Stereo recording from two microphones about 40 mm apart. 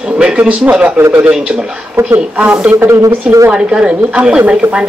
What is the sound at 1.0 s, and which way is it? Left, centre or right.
Speech, right.